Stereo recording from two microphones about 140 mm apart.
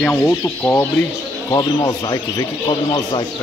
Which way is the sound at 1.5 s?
30° left (ahead or behind).